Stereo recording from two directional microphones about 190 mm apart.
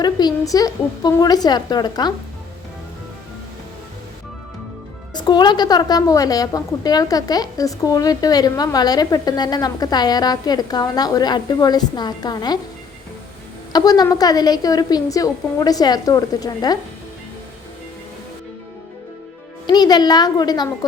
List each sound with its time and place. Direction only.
0.0 s a woman's voice: 20° left (ahead or behind)
5.1 s a woman's voice: 20° left (ahead or behind)
13.7 s a woman's voice: 20° left (ahead or behind)
19.6 s a woman's voice: 20° left (ahead or behind)